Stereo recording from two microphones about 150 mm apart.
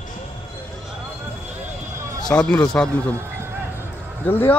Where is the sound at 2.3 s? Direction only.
5° left (ahead or behind).